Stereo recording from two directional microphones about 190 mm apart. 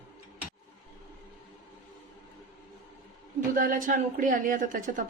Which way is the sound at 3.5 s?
45° right (ahead or behind).